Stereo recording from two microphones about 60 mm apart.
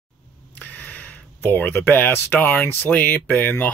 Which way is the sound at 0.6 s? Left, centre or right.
Left.